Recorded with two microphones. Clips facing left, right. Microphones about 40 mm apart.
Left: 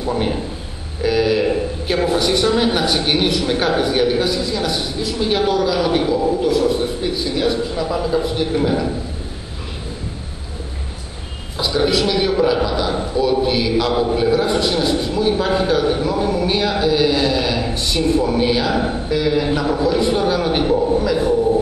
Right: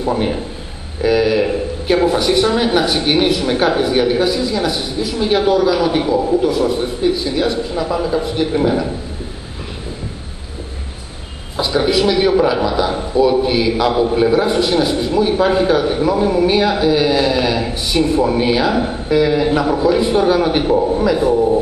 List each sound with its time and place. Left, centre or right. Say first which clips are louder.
1.0 s a man's voice: right 2 dB; centre
11.5 s a man's voice: right 2 dB; centre